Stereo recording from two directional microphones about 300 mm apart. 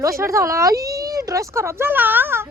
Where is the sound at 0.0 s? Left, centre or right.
Centre.